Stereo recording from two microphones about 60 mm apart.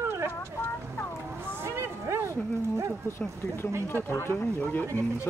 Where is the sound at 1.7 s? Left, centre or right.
Right.